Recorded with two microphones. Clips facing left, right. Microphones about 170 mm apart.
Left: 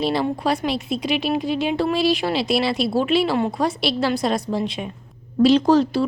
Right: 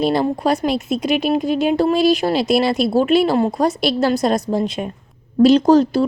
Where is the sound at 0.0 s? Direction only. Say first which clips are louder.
Right 4 dB; 45° right (ahead or behind).